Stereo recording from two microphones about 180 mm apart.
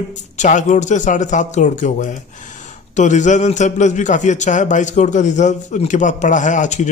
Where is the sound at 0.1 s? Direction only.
40° left (ahead or behind).